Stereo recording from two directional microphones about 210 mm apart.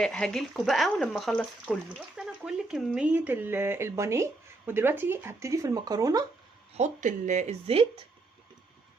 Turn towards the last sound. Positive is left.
turn(degrees=-30)  # may be behind; listen again after turning